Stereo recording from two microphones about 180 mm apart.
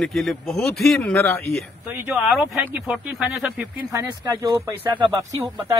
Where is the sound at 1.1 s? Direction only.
15° left (ahead or behind).